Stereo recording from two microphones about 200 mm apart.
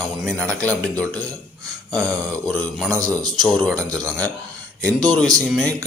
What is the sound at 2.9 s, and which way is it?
Speech, 15° right (ahead or behind).